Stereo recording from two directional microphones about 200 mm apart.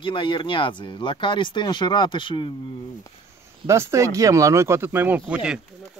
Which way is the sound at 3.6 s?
15° right (ahead or behind).